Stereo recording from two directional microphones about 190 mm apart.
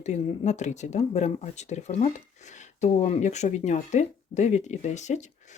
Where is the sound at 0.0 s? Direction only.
35° left (ahead or behind).